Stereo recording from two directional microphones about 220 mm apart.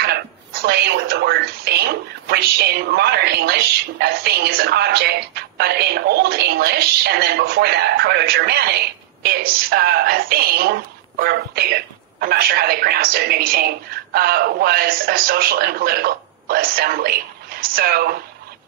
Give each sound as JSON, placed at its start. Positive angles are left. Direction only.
{"t": 0.0, "sound": "a woman's voice", "side_deg": -50}